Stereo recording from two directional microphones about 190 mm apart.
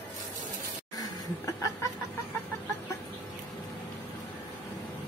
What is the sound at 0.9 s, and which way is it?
Laughter, 20° left (ahead or behind).